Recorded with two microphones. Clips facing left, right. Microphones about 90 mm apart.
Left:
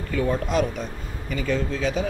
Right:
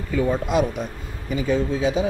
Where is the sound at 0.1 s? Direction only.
5° right (ahead or behind).